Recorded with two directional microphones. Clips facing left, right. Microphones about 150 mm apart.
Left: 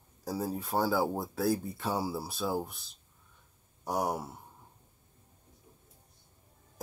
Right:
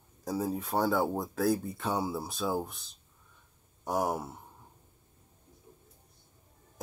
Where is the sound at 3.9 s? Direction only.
5° right (ahead or behind).